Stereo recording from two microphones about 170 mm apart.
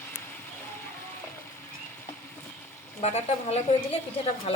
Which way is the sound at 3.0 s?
40° left (ahead or behind).